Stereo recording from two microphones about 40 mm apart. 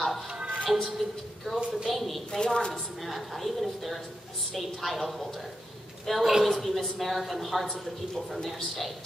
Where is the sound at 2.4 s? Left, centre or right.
Centre.